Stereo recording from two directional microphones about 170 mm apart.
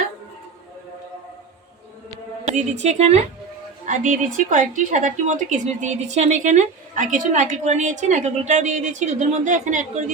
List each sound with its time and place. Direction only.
2.4 s a woman's voice: 45° right (ahead or behind)